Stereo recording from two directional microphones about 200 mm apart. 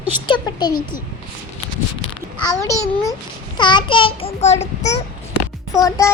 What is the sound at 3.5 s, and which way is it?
Child singing, 20° left (ahead or behind).